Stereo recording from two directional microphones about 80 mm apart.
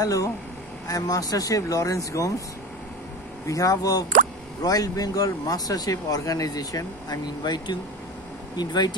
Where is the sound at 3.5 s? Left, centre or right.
Left.